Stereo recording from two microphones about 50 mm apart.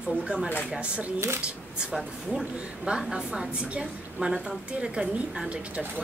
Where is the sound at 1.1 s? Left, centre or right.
Right.